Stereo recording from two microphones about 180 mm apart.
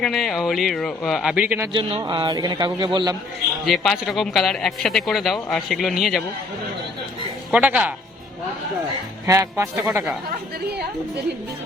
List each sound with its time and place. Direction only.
0.0 s a man's voice: centre (ahead or behind)
1.7 s a man's voice: 25° right (ahead or behind)
3.7 s a man's voice: centre (ahead or behind)
7.5 s speech: 10° right (ahead or behind)
9.2 s speech: 15° right (ahead or behind)
9.8 s a man's voice: 5° right (ahead or behind)